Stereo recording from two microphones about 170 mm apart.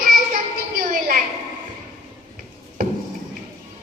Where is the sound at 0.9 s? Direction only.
55° right (ahead or behind).